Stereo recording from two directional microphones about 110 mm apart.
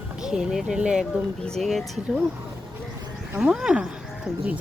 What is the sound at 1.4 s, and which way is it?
Speech, 5° left (ahead or behind).